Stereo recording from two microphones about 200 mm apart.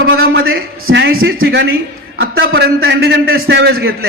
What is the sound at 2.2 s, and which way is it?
A man's voice, 55° right (ahead or behind).